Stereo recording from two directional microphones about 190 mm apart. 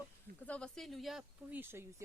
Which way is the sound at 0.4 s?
5° left (ahead or behind).